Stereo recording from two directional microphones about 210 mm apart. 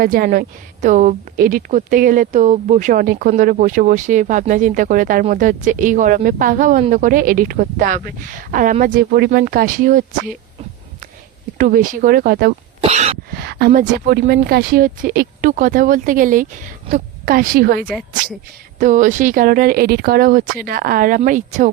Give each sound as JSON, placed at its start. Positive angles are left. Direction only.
{"t": 0.0, "sound": "a woman's voice", "side_deg": -40}
{"t": 11.5, "sound": "speech", "side_deg": -40}
{"t": 12.8, "sound": "cough", "side_deg": -30}
{"t": 13.3, "sound": "a woman's voice", "side_deg": -50}